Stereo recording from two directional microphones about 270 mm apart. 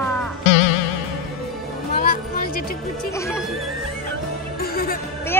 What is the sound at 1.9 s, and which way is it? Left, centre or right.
Music, left.